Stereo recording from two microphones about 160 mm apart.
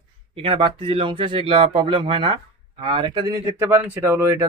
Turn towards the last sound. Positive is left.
turn(degrees=-15)  # may be behind; listen again after turning